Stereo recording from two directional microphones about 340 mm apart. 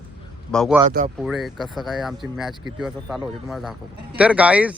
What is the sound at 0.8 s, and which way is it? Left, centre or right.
Speech, right.